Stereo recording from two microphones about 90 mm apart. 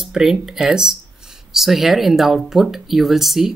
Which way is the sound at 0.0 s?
5° right (ahead or behind).